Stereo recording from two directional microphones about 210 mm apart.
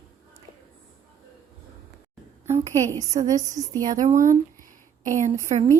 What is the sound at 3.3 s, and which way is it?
Speech, 15° right (ahead or behind).